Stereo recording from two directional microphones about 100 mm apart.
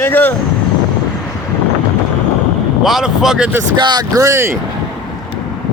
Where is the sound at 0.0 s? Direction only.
20° left (ahead or behind).